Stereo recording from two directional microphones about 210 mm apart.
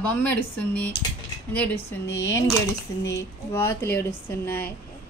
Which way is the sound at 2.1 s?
60° left (ahead or behind).